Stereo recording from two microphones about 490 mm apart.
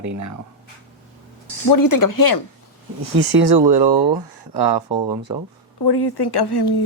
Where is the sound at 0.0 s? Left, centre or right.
Right.